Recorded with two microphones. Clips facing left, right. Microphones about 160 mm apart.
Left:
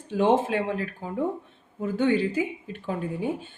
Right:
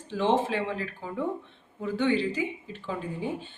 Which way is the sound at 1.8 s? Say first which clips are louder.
Left 3 dB; 45° left (ahead or behind).